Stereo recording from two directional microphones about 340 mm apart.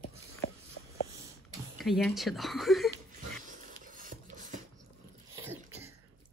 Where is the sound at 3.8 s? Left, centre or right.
Right.